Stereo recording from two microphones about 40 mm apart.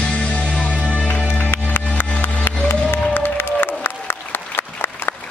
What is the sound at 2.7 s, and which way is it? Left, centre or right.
Applause, left.